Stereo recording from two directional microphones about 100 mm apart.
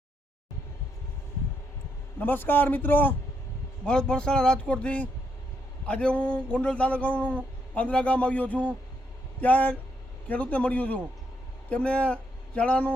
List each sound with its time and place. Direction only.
2.1 s a man's voice: 20° left (ahead or behind)
3.8 s a man's voice: 10° left (ahead or behind)